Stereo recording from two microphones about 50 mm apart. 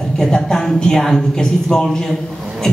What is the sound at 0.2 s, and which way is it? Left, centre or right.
A man's voice, centre.